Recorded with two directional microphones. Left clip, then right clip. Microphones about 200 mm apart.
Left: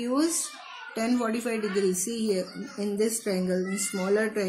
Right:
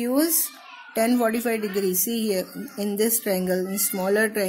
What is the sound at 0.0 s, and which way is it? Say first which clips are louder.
Speech: right 4 dB; 40° right (ahead or behind).